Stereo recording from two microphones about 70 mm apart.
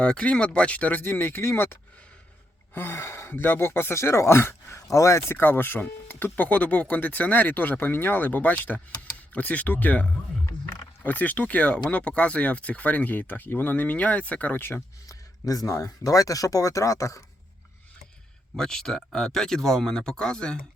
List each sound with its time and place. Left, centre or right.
0.0 s speech: centre; by 5.4 s left
5.4 s speech: left
15.0 s speech: left
18.5 s speech: centre